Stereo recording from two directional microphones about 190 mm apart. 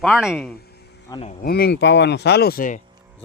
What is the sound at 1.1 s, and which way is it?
Speech, 30° left (ahead or behind).